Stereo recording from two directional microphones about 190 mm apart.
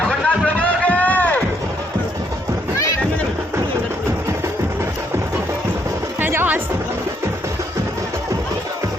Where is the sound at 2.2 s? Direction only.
15° right (ahead or behind).